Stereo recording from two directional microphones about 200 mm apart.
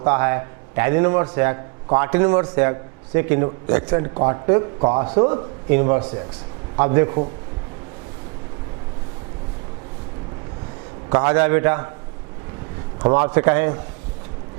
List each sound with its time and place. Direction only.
0.0 s a man's voice: 15° right (ahead or behind)
4.1 s a man's voice: 25° right (ahead or behind)
5.6 s a man's voice: 15° right (ahead or behind)
6.0 s a man's voice: 30° right (ahead or behind)
6.7 s a man's voice: 15° right (ahead or behind)
11.1 s a man's voice: 15° right (ahead or behind)
13.0 s a man's voice: 20° right (ahead or behind)